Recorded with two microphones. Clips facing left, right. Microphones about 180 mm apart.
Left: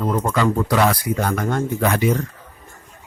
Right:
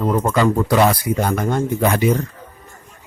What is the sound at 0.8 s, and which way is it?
Speech, 20° right (ahead or behind).